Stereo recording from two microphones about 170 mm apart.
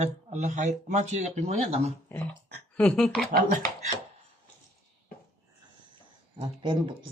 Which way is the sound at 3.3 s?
55° right (ahead or behind).